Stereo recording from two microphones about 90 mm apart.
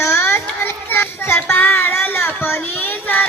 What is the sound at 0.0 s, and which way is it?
Child singing, 25° left (ahead or behind).